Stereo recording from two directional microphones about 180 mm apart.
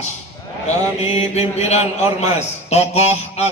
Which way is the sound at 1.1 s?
35° left (ahead or behind).